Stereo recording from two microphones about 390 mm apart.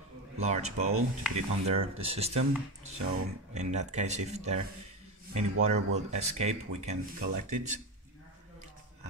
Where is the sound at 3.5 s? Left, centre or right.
Centre.